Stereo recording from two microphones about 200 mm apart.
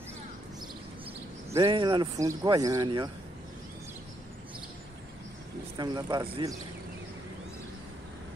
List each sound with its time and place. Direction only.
1.5 s speech: 20° right (ahead or behind)
5.8 s speech: 20° right (ahead or behind)